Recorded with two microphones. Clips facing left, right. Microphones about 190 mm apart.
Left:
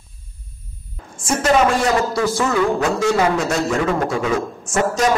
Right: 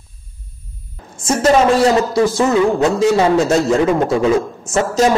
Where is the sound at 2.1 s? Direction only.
25° right (ahead or behind).